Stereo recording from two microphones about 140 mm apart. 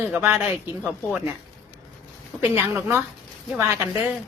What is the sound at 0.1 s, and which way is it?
A woman's voice, 15° right (ahead or behind).